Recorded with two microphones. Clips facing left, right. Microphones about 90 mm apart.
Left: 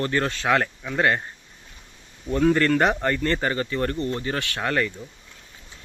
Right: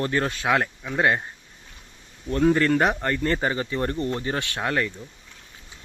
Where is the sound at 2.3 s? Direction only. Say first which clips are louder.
Even; 5° right (ahead or behind); by 4.6 s 20° right (ahead or behind).